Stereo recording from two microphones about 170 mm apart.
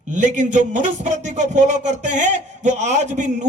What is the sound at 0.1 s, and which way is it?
Speech, 45° right (ahead or behind).